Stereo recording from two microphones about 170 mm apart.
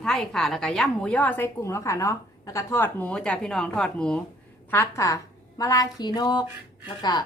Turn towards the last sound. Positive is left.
turn(degrees=25)  # may be behind; listen again after turning